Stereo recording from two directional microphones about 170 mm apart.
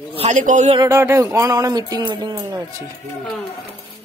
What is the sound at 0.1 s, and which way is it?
Speech, 40° right (ahead or behind).